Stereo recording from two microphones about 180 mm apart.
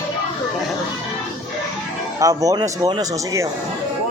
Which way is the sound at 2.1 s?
20° right (ahead or behind).